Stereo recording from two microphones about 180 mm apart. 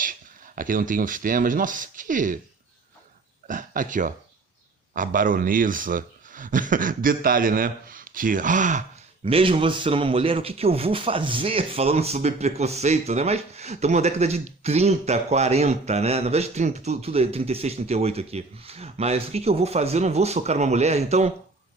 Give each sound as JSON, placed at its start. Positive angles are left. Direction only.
{"t": 0.5, "sound": "a man's voice", "side_deg": -50}
{"t": 3.4, "sound": "a man's voice", "side_deg": -45}
{"t": 9.2, "sound": "speech", "side_deg": -30}